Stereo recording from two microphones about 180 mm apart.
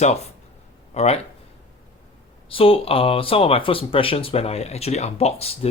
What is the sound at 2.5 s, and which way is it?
Speech, 30° left (ahead or behind).